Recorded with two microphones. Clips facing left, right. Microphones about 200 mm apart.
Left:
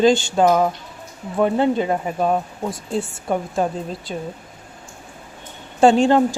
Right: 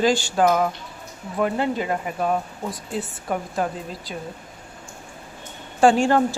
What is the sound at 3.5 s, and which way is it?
Speech, 25° left (ahead or behind).